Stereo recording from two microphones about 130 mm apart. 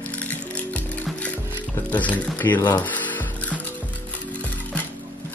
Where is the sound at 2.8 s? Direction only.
15° left (ahead or behind).